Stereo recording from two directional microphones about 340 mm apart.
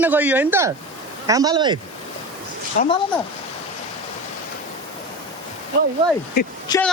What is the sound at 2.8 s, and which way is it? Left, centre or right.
Speech, left.